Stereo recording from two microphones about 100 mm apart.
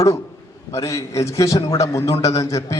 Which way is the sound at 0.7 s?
30° left (ahead or behind).